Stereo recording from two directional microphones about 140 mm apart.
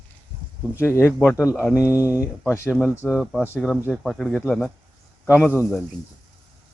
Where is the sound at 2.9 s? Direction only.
15° left (ahead or behind).